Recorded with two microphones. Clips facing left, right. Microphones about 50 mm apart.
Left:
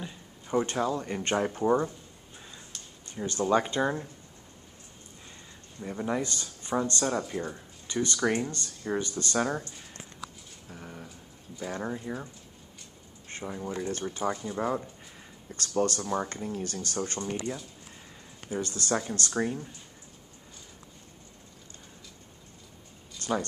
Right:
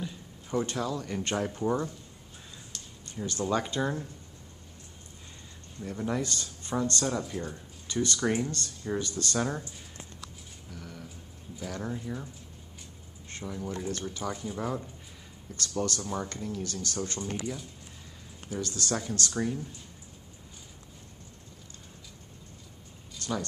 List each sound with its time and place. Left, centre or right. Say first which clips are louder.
0.0 s a sound: right 2 dB; centre
0.7 s speech: left 3 dB; left
5.8 s speech: left 1 dB; centre
10.7 s a sound: left 1 dB; left
11.6 s speech: left 2 dB; left
13.3 s speech: left 1 dB; left
14.3 s speech: left 2 dB; centre
15.5 s speech: left 4 dB; left
18.5 s speech: left 2 dB; left
23.2 s a sound: left 4 dB; left